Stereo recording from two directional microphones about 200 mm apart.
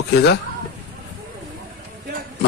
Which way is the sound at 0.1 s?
55° left (ahead or behind).